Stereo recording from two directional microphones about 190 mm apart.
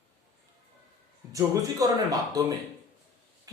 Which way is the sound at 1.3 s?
15° right (ahead or behind).